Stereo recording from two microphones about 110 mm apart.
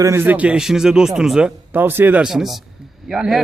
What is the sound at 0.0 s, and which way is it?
A man's voice, 20° right (ahead or behind).